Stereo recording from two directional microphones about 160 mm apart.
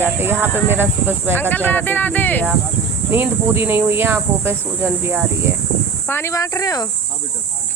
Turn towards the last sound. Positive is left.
turn(degrees=25)  # may be behind; listen again after turning